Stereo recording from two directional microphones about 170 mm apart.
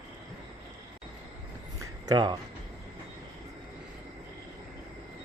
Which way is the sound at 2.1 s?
25° right (ahead or behind).